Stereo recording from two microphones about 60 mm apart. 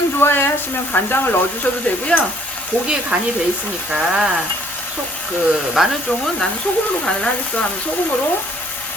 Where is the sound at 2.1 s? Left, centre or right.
Left.